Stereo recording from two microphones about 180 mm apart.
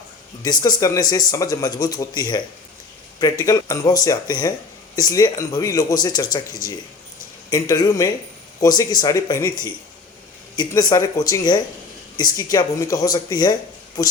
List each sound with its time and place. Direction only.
0.4 s speech: 20° left (ahead or behind)
3.4 s speech: 20° left (ahead or behind)